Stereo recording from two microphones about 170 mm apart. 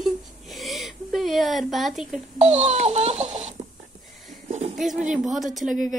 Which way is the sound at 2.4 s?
40° right (ahead or behind).